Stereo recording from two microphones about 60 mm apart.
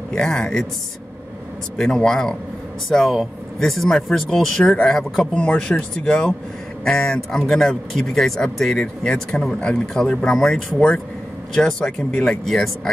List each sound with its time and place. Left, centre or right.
0.1 s speech: centre
1.8 s speech: centre
5.3 s speech: centre
8.8 s speech: centre
11.8 s speech: left
12.3 s speech: centre